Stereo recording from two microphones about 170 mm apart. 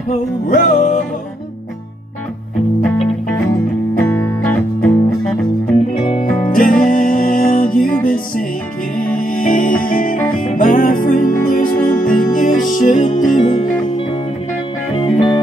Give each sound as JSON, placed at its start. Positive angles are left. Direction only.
{"t": 0.1, "sound": "music", "side_deg": 45}
{"t": 2.8, "sound": "music", "side_deg": 5}
{"t": 6.5, "sound": "music", "side_deg": 55}
{"t": 15.0, "sound": "music", "side_deg": 30}